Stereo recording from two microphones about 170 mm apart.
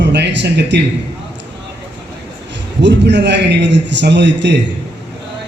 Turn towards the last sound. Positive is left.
turn(degrees=-90)